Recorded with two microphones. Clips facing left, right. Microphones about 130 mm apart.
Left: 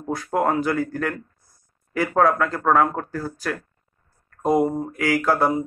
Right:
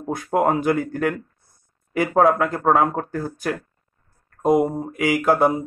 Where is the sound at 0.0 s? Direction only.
20° right (ahead or behind).